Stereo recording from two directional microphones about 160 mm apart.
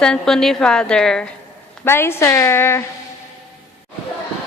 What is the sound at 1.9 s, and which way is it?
Speech, 15° left (ahead or behind).